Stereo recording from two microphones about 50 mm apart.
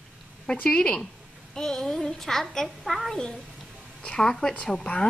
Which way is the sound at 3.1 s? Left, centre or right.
Centre.